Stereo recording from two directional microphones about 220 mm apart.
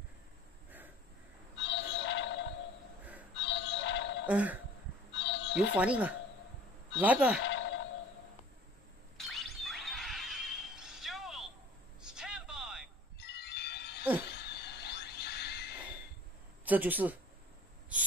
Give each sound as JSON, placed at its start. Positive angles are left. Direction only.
{"t": 1.6, "sound": "synthetic singing", "side_deg": 55}
{"t": 3.3, "sound": "music", "side_deg": 55}
{"t": 4.3, "sound": "speech", "side_deg": -5}
{"t": 5.1, "sound": "music", "side_deg": 55}
{"t": 5.8, "sound": "speech", "side_deg": -5}
{"t": 7.4, "sound": "a sound", "side_deg": 60}
{"t": 9.3, "sound": "a sound", "side_deg": 0}
{"t": 13.2, "sound": "wind chime", "side_deg": 50}
{"t": 14.3, "sound": "a sound", "side_deg": 50}
{"t": 16.6, "sound": "speech", "side_deg": -5}